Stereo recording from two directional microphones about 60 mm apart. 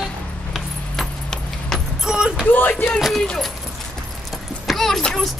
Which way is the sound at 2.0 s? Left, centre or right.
Centre.